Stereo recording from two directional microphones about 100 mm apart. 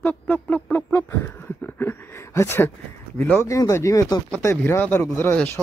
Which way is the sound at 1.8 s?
25° left (ahead or behind).